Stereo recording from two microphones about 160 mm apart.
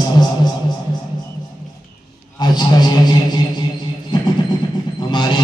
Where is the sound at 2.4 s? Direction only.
25° left (ahead or behind).